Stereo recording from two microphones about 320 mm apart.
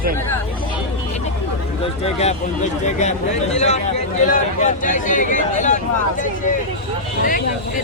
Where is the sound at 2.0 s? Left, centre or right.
Centre.